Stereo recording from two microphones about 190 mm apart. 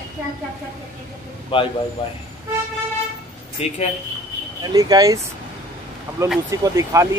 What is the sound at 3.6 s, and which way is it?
Speech, 35° left (ahead or behind).